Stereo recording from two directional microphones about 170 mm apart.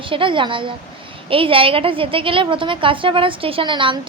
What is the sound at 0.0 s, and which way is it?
A woman's voice, 30° right (ahead or behind).